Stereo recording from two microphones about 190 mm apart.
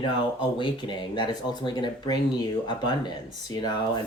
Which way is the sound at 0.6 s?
25° left (ahead or behind).